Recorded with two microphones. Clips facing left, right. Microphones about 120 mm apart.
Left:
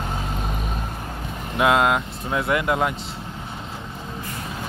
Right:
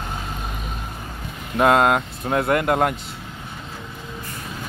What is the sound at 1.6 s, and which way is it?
Speech, 45° right (ahead or behind).